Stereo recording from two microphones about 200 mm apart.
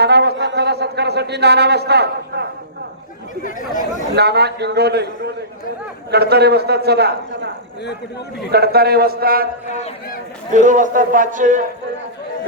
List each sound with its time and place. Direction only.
0.0 s a sound: 55° right (ahead or behind)
4.1 s a man's voice: 55° right (ahead or behind)
8.5 s a man's voice: 50° right (ahead or behind)
9.6 s a man's voice: 35° left (ahead or behind)
10.5 s a man's voice: 40° right (ahead or behind)